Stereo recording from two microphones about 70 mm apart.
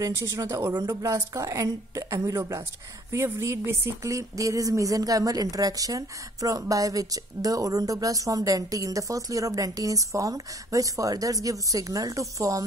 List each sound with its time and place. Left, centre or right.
0.1 s a woman's voice: right
4.0 s speech: right